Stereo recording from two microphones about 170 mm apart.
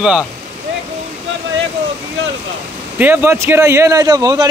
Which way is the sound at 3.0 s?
15° right (ahead or behind).